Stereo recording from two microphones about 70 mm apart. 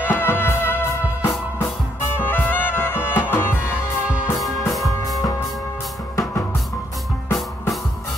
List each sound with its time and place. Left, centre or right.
0.0 s music: left
4.4 s music: centre